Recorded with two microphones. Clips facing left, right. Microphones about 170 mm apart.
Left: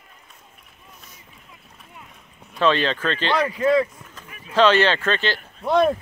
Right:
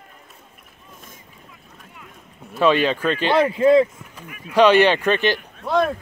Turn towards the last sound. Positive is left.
turn(degrees=15)  # may be behind; listen again after turning